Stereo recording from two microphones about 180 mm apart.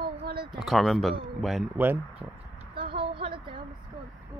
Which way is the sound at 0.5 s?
Centre (ahead or behind).